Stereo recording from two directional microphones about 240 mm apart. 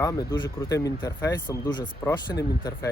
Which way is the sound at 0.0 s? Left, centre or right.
Centre.